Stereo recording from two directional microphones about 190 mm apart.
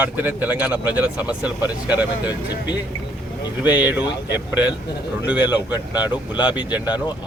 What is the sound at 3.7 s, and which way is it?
A man's voice, 10° right (ahead or behind).